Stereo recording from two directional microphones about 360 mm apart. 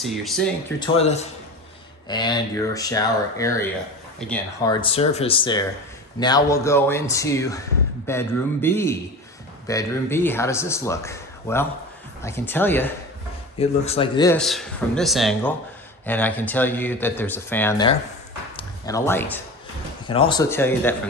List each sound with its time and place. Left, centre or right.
0.0 s a man's voice: centre
0.8 s a man's voice: centre
13.6 s a man's voice: centre